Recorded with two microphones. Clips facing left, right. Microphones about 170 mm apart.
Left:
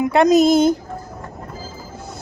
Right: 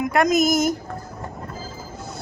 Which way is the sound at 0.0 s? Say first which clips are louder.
Left 5 dB; 30° left (ahead or behind).